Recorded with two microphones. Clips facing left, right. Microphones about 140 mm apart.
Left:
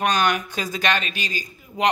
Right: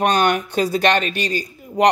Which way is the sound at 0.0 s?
55° right (ahead or behind).